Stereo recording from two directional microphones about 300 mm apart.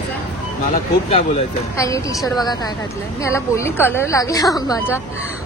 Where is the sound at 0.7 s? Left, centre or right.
Left.